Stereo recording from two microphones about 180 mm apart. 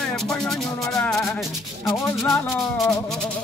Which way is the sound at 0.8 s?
15° left (ahead or behind).